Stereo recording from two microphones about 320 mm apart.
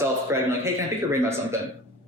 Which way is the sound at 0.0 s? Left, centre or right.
Centre.